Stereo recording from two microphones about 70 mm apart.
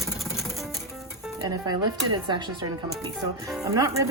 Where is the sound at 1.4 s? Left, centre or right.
Right.